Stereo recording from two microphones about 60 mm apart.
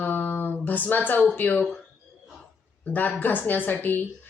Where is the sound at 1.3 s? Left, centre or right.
Left.